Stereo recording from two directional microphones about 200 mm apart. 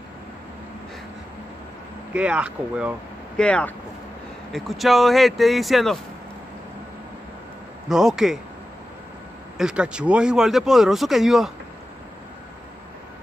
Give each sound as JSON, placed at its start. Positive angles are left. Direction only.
{"t": 2.1, "sound": "speech", "side_deg": -5}
{"t": 3.3, "sound": "speech", "side_deg": 5}
{"t": 7.9, "sound": "speech", "side_deg": 0}
{"t": 9.6, "sound": "speech", "side_deg": -5}